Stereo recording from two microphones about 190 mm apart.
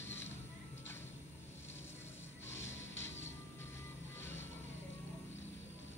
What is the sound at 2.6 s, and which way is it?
Music, 90° left.